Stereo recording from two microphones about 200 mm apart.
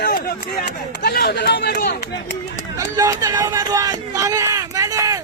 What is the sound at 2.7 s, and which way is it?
Speech, 15° right (ahead or behind).